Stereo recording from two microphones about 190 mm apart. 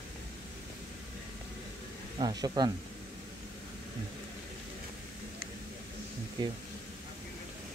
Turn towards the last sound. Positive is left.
turn(degrees=-20)  # may be behind; listen again after turning